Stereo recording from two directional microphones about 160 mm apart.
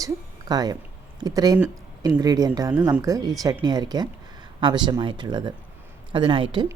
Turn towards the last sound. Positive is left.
turn(degrees=-30)  # may be behind; listen again after turning